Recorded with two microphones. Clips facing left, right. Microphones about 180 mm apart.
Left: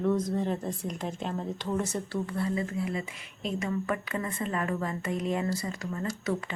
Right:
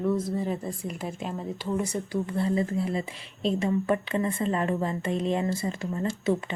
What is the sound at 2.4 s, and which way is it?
Speech, 30° right (ahead or behind).